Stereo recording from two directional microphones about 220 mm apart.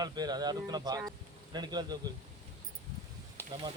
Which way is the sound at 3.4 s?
10° left (ahead or behind).